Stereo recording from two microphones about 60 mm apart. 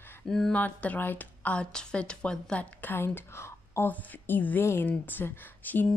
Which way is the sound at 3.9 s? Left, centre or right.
Left.